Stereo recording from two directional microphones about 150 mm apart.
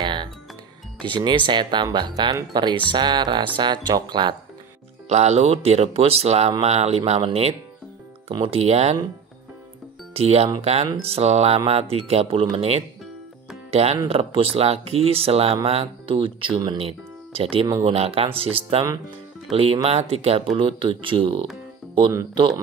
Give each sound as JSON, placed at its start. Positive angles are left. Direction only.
{"t": 0.0, "sound": "music", "side_deg": -30}
{"t": 1.0, "sound": "speech", "side_deg": -35}
{"t": 5.0, "sound": "speech", "side_deg": -45}
{"t": 10.1, "sound": "speech", "side_deg": -45}